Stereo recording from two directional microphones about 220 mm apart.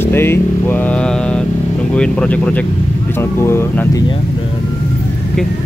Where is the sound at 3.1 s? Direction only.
10° left (ahead or behind).